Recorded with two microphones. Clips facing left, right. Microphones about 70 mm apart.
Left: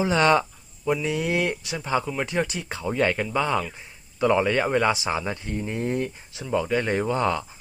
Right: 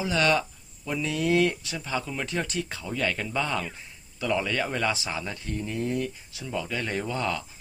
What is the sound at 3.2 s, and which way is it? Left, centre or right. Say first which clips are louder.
Speech: left 5 dB; centre.